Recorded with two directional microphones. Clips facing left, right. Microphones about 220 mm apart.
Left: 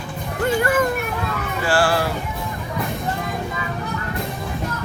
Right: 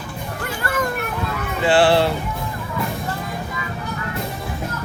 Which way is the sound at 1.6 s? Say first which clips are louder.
Right 5 dB; 25° right (ahead or behind).